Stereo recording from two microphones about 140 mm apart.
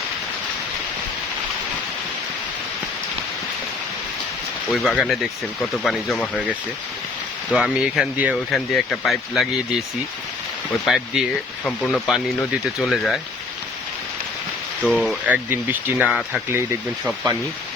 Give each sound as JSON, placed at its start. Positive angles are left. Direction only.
{"t": 4.7, "sound": "speech", "side_deg": 0}
{"t": 7.5, "sound": "speech", "side_deg": 0}
{"t": 10.8, "sound": "speech", "side_deg": 0}
{"t": 14.8, "sound": "speech", "side_deg": 0}
{"t": 15.3, "sound": "speech", "side_deg": -15}
{"t": 16.5, "sound": "speech", "side_deg": -15}